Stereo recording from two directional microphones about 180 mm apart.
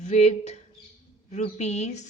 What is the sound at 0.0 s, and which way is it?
A woman's voice, 40° left (ahead or behind).